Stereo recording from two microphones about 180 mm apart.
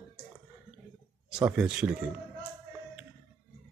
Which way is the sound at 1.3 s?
5° right (ahead or behind).